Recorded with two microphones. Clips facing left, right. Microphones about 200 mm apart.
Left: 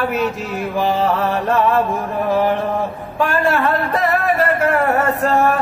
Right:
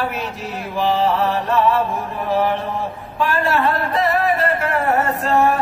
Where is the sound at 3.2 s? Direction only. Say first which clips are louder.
Left 2 dB; 50° left (ahead or behind).